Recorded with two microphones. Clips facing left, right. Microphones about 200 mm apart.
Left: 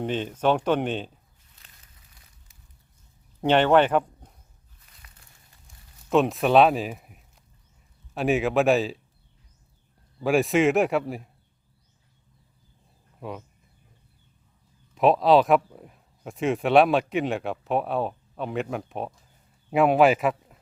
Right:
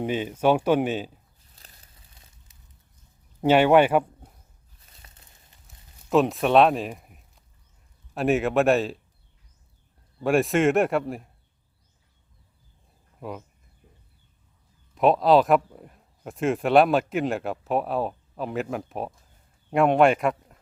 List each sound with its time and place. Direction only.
0.0 s speech: 10° right (ahead or behind)
1.5 s a sound: 35° right (ahead or behind)
3.4 s speech: 10° right (ahead or behind)
4.8 s a sound: 30° right (ahead or behind)
5.6 s speech: centre (ahead or behind)
10.2 s speech: centre (ahead or behind)
13.1 s speech: centre (ahead or behind)
14.9 s speech: centre (ahead or behind)